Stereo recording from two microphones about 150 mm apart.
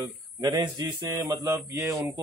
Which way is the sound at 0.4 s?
20° right (ahead or behind).